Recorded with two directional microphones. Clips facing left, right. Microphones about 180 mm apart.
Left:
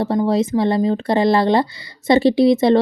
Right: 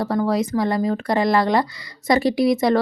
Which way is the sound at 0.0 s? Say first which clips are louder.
Left 3 dB; 25° left (ahead or behind).